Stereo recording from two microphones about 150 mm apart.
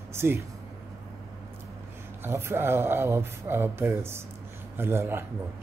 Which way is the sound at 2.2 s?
15° right (ahead or behind).